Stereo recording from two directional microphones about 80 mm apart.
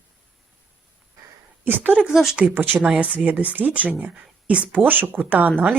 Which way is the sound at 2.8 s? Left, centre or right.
Centre.